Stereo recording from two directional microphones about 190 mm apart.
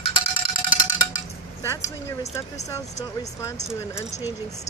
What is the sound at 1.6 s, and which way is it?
Speech, 15° left (ahead or behind).